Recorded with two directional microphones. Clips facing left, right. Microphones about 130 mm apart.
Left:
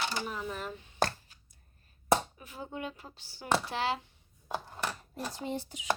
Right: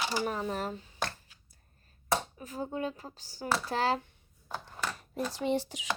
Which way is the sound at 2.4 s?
40° right (ahead or behind).